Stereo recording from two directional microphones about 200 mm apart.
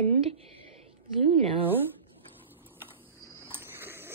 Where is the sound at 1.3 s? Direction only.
30° right (ahead or behind).